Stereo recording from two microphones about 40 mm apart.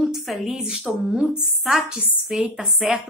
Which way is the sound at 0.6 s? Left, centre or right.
Right.